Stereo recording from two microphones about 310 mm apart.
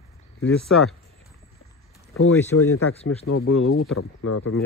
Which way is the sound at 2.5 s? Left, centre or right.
Left.